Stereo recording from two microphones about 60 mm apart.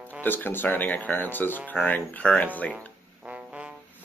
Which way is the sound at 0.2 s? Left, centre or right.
Left.